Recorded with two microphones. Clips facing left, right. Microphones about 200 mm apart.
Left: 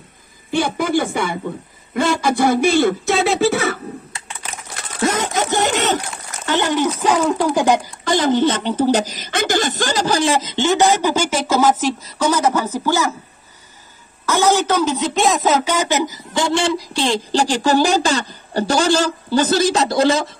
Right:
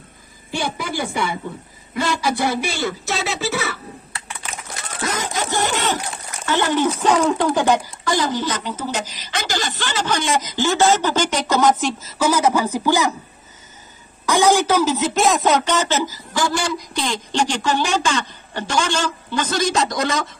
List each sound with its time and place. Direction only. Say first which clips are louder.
0.5 s speech: left 7 dB; 50° left (ahead or behind)
5.5 s a sound: left 3 dB; 20° left (ahead or behind)
6.9 s speech: even; 5° left (ahead or behind)
7.5 s a woman's voice: left 2 dB; 15° left (ahead or behind); by 13.1 s 15° right (ahead or behind)
14.2 s speech: even; 15° right (ahead or behind); by 20.3 s 30° left (ahead or behind)